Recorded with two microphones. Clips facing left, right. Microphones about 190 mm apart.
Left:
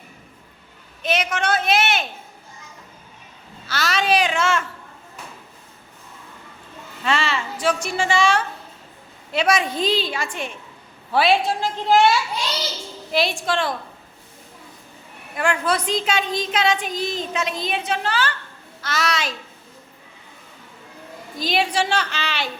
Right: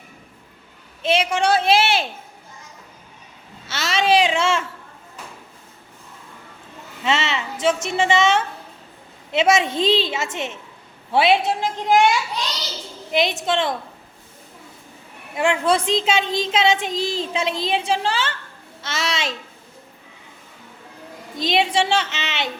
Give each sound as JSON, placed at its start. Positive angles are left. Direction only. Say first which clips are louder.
{"t": 1.0, "sound": "a woman's voice", "louder": "right 4 dB", "side_deg": -30}
{"t": 3.7, "sound": "speech", "louder": "right 2 dB", "side_deg": -25}
{"t": 7.0, "sound": "a woman's voice", "louder": "right 1 dB", "side_deg": -20}
{"t": 13.1, "sound": "a woman's voice", "louder": "right 1 dB", "side_deg": -20}
{"t": 15.4, "sound": "a woman's voice", "louder": "right 3 dB", "side_deg": -25}
{"t": 21.3, "sound": "a woman's voice", "louder": "right 2 dB", "side_deg": -25}